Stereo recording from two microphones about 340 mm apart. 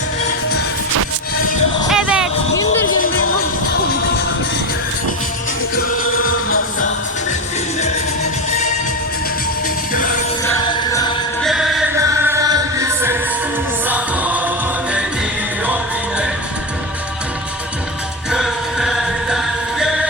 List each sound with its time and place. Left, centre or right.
1.9 s music: centre
5.7 s music: left
9.9 s music: left
10.4 s music: centre
11.4 s music: centre
18.3 s music: centre